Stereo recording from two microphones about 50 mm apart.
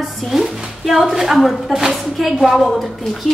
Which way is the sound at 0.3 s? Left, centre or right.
Centre.